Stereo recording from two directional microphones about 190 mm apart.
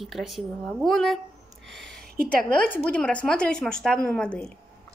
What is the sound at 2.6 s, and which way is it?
A woman's voice, 5° left (ahead or behind).